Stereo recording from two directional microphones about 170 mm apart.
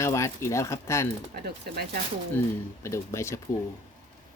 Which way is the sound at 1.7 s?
65° right (ahead or behind).